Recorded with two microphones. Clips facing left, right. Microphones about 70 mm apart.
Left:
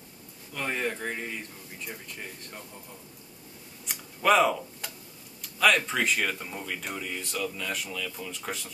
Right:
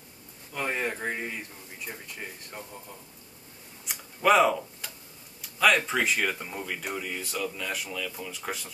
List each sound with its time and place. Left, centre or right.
0.5 s speech: centre
3.8 s a sound: centre
5.4 s speech: centre